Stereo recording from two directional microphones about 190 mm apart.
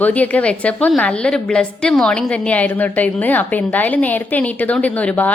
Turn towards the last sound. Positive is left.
turn(degrees=5)  # may be behind; listen again after turning